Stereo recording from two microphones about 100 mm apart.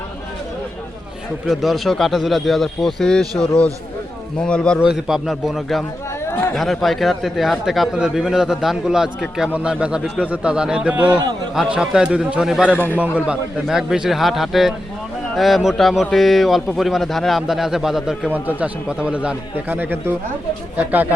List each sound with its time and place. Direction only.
1.5 s a man's voice: centre (ahead or behind)
4.8 s speech: 5° right (ahead or behind)
12.7 s a man's voice: 20° left (ahead or behind)
13.0 s speech: 10° right (ahead or behind)